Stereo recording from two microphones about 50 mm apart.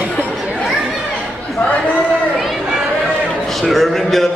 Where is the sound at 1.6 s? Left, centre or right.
Left.